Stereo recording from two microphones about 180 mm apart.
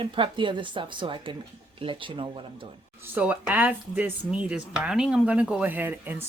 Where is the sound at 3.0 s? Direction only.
10° right (ahead or behind).